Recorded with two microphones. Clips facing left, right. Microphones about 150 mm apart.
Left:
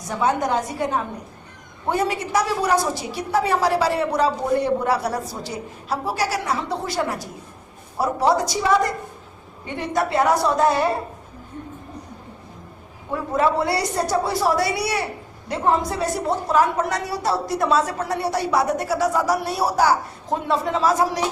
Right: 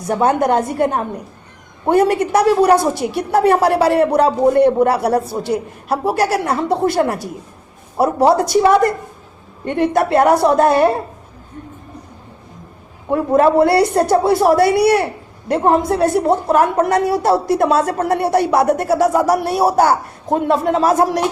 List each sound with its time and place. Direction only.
0.1 s a woman's voice: 55° right (ahead or behind)
13.1 s a woman's voice: 55° right (ahead or behind)